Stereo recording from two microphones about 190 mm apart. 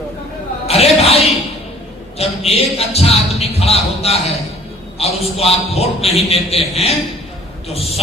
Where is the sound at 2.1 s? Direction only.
30° left (ahead or behind).